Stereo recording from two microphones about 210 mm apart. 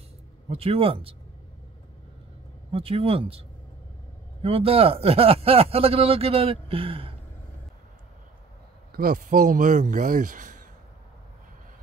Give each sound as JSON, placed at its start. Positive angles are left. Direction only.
{"t": 0.5, "sound": "speech", "side_deg": -25}
{"t": 2.7, "sound": "speech", "side_deg": -25}
{"t": 8.9, "sound": "speech", "side_deg": -45}